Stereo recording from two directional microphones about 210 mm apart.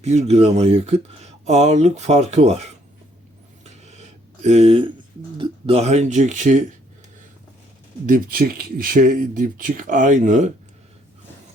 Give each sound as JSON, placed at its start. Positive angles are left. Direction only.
{"t": 0.0, "sound": "speech", "side_deg": -30}
{"t": 3.6, "sound": "a sound", "side_deg": -30}
{"t": 4.4, "sound": "speech", "side_deg": -30}
{"t": 8.0, "sound": "speech", "side_deg": -45}